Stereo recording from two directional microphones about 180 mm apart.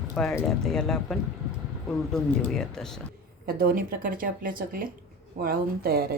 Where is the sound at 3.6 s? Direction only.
50° right (ahead or behind).